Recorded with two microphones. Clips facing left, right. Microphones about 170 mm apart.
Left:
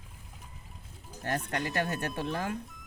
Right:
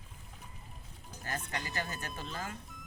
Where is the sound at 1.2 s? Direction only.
65° left (ahead or behind).